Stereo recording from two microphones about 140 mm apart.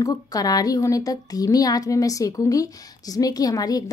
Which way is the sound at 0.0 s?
25° left (ahead or behind).